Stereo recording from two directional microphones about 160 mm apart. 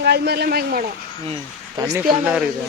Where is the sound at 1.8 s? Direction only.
20° right (ahead or behind).